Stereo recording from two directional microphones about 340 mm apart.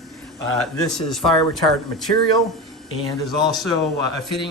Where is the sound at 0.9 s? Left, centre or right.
Centre.